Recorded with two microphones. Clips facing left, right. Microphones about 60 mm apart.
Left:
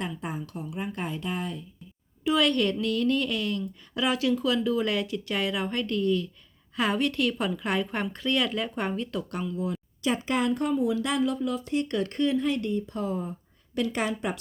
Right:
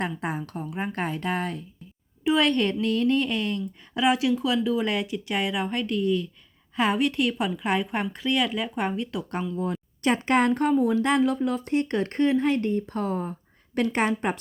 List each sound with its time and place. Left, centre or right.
0.0 s speech: right
2.2 s speech: right; by 9.2 s centre
10.0 s a woman's voice: right
13.7 s a woman's voice: right